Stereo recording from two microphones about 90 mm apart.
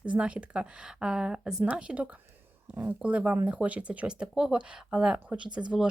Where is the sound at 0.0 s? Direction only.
15° right (ahead or behind).